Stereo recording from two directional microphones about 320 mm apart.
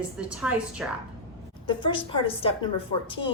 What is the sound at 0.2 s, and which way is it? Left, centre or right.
Speech, centre.